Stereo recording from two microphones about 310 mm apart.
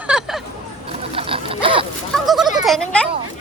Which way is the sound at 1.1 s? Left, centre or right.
Centre.